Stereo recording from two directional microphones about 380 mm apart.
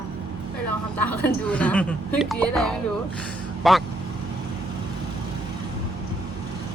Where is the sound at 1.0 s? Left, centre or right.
Centre.